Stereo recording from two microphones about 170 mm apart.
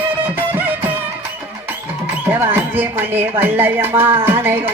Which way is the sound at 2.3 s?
15° right (ahead or behind).